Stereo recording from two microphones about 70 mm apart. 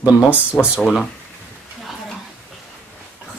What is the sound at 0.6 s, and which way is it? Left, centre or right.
Speech, centre.